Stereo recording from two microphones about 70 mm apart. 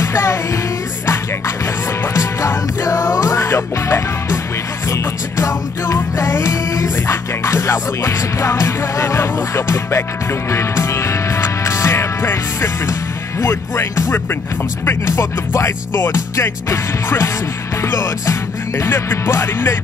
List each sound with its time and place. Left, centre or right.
0.0 s music: left
2.1 s music: left